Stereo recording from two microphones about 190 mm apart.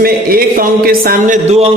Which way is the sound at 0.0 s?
50° right (ahead or behind).